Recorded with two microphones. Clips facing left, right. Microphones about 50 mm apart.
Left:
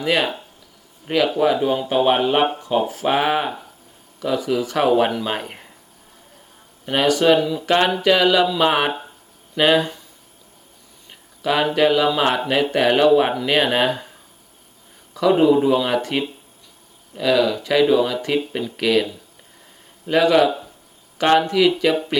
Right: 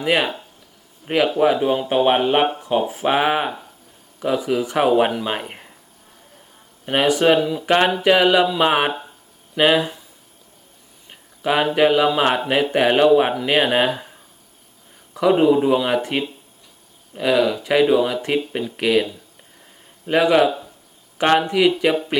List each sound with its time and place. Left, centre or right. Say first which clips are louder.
0.0 s speech: right 1 dB; centre
6.8 s speech: even; centre
8.9 s a sound: even; centre
9.6 s speech: even; centre
11.1 s speech: right 1 dB; centre
15.3 s speech: even; centre
20.1 s speech: even; centre